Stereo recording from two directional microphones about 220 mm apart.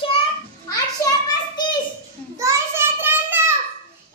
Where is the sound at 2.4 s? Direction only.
10° right (ahead or behind).